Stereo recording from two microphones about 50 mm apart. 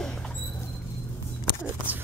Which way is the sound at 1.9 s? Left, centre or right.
Right.